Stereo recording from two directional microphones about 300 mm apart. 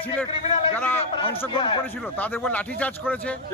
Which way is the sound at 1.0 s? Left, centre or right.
Centre.